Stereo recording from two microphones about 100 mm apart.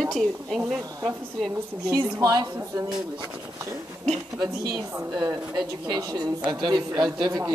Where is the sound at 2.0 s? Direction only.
35° right (ahead or behind).